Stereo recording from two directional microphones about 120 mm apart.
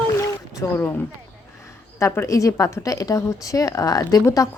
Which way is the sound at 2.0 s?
20° left (ahead or behind).